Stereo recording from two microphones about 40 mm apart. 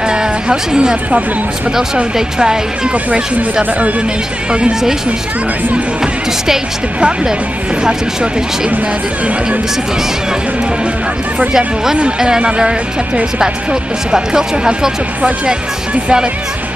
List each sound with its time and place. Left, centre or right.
0.1 s music: centre
2.1 s speech: centre
4.5 s speech: right
11.3 s speech: centre